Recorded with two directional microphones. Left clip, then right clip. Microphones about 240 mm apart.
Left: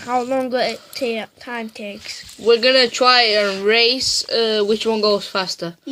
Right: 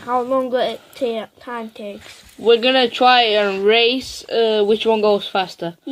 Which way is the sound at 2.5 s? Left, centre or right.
Centre.